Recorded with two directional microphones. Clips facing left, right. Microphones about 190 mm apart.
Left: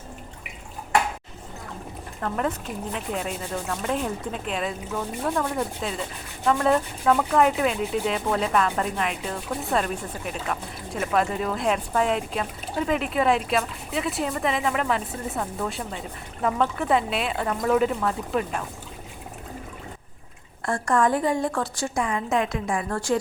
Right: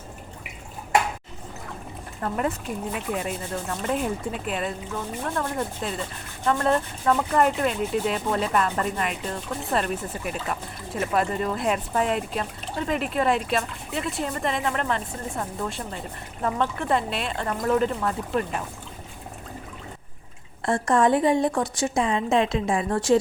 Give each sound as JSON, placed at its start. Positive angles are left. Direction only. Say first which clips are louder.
{"t": 2.2, "sound": "speech", "louder": "even", "side_deg": -5}
{"t": 20.7, "sound": "a woman's voice", "louder": "right 2 dB", "side_deg": -20}